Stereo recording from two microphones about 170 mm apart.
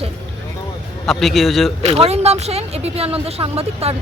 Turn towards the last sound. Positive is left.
turn(degrees=-35)  # may be behind; listen again after turning